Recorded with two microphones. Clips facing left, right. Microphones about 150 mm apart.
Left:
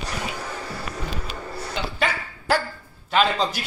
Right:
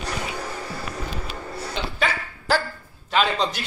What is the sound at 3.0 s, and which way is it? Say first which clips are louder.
Speech: left 1 dB; 5° left (ahead or behind).